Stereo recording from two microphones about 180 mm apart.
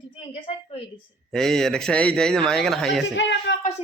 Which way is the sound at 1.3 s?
Centre (ahead or behind).